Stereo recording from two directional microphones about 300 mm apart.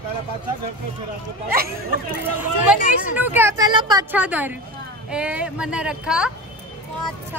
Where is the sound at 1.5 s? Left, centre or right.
Right.